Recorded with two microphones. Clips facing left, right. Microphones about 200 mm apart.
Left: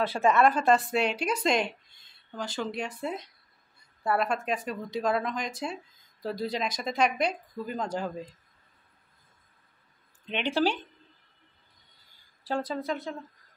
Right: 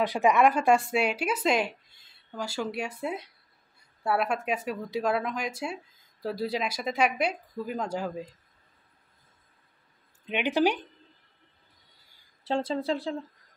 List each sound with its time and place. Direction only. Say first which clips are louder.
0.0 s speech: right 1 dB; 15° right (ahead or behind)
10.2 s speech: right 2 dB; 10° right (ahead or behind)
12.4 s speech: right 3 dB; 25° right (ahead or behind)